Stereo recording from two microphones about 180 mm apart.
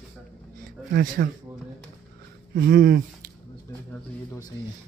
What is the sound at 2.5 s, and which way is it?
Speech, 55° right (ahead or behind).